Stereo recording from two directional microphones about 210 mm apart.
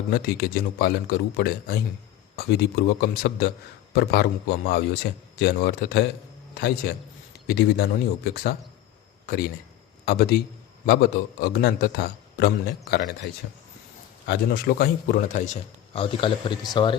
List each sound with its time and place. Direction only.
0.1 s a man's voice: 50° left (ahead or behind)
10.8 s a man's voice: 50° left (ahead or behind)
14.3 s a man's voice: 50° left (ahead or behind); by 16.9 s 25° left (ahead or behind)